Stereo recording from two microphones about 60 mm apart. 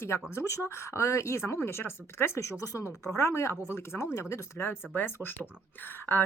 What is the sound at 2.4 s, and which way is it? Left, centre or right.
Speech, left.